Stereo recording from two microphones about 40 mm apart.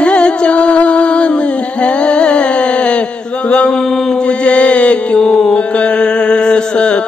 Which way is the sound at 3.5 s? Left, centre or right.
Left.